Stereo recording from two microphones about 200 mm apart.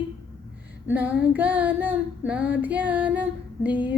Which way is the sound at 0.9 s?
10° right (ahead or behind).